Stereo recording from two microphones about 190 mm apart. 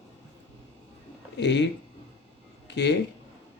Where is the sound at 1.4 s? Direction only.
65° left (ahead or behind).